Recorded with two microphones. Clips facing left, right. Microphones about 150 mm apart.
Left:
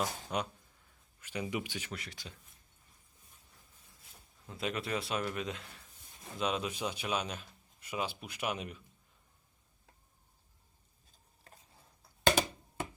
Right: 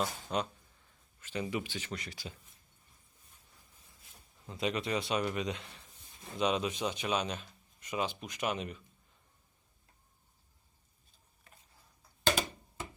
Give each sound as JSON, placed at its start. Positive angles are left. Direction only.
{"t": 0.0, "sound": "a man's voice", "side_deg": 10}
{"t": 4.4, "sound": "a man's voice", "side_deg": 0}
{"t": 11.5, "sound": "stir", "side_deg": 35}